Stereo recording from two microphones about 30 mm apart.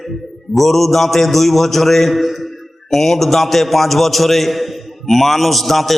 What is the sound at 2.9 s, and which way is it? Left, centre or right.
A man's voice, centre.